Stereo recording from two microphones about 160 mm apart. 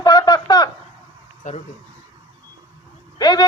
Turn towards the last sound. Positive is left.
turn(degrees=25)  # may be behind; listen again after turning